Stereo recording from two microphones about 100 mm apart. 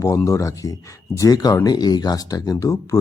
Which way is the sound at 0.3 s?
30° left (ahead or behind).